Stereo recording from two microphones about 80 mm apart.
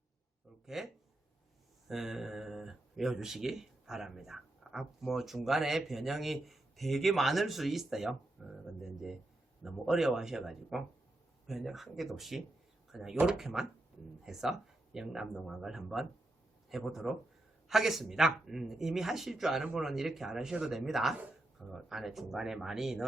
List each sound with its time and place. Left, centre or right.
0.6 s speech: centre
1.9 s speech: centre
14.9 s speech: centre